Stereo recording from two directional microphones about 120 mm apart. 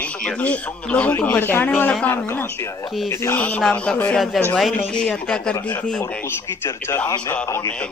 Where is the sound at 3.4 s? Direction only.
10° left (ahead or behind).